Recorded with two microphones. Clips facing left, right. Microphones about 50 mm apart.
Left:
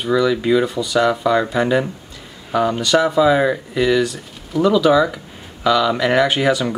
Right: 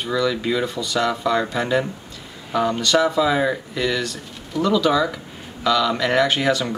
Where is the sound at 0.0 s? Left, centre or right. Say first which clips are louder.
Left 5 dB; centre.